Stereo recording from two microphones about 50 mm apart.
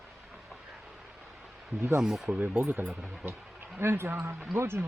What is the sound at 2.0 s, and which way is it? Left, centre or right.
Speech, centre.